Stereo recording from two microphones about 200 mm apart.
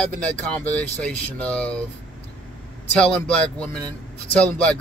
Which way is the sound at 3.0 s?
5° left (ahead or behind).